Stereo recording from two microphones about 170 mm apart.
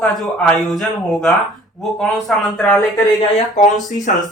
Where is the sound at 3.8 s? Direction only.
45° left (ahead or behind).